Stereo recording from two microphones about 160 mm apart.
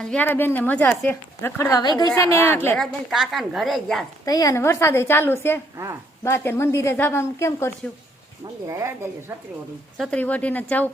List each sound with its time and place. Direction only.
0.0 s speech: 10° left (ahead or behind)
2.7 s a woman's voice: centre (ahead or behind)
4.3 s speech: 25° left (ahead or behind)
5.7 s speech: 15° right (ahead or behind)
6.2 s speech: 15° left (ahead or behind)
8.6 s speech: 20° right (ahead or behind)
10.0 s speech: 10° left (ahead or behind)